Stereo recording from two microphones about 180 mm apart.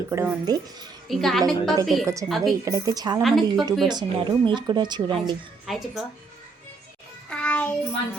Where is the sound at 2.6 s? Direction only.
20° right (ahead or behind).